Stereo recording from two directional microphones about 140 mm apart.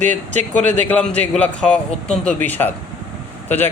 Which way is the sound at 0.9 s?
10° left (ahead or behind).